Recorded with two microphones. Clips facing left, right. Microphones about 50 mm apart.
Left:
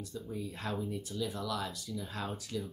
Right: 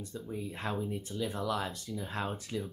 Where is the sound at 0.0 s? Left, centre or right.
Right.